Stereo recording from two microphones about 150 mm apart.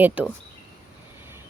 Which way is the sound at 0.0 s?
10° right (ahead or behind).